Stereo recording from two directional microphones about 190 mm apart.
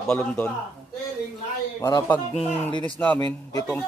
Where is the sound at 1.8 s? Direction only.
20° left (ahead or behind).